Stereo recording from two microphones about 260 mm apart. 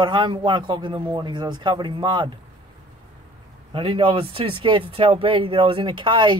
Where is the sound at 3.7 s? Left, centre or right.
Right.